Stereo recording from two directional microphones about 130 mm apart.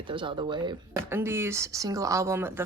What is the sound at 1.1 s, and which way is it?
Speech, 20° right (ahead or behind).